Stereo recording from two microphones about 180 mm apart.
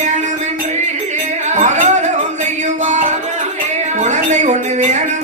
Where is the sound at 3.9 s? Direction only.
40° right (ahead or behind).